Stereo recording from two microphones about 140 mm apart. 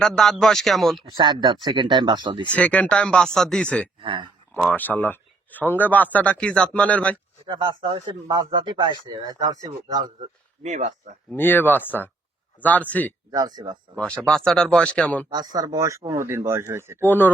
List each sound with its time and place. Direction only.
0.0 s speech: 5° left (ahead or behind)
1.1 s speech: 30° right (ahead or behind)
2.5 s speech: 10° left (ahead or behind)
4.0 s speech: 35° right (ahead or behind)
4.7 s speech: 15° left (ahead or behind)
7.4 s speech: 35° right (ahead or behind)
10.2 s speech: 55° right (ahead or behind)
11.3 s speech: 15° left (ahead or behind)
13.3 s speech: 30° right (ahead or behind)
13.9 s speech: 10° left (ahead or behind)
15.3 s speech: 30° right (ahead or behind)
17.1 s speech: 15° left (ahead or behind)